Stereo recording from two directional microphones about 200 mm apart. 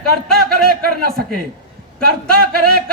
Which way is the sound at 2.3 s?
50° right (ahead or behind).